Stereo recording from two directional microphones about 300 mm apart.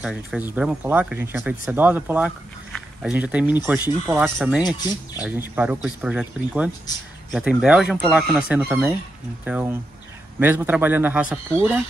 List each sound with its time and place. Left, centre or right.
0.0 s speech: centre